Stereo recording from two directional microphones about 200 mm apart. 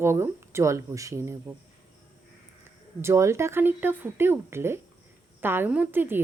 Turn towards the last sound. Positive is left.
turn(degrees=-10)  # may be behind; listen again after turning